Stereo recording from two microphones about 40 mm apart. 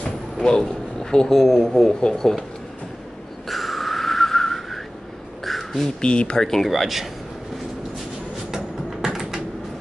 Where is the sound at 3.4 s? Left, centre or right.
Centre.